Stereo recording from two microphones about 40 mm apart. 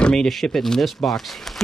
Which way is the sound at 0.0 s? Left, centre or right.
Centre.